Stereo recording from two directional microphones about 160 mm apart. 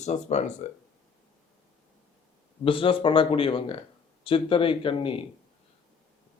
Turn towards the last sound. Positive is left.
turn(degrees=35)  # may be behind; listen again after turning